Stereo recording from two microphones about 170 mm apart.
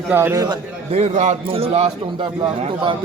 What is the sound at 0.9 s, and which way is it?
A man's voice, 40° right (ahead or behind).